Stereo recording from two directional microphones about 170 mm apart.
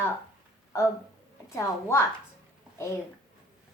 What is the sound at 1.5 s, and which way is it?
Speech, 15° left (ahead or behind).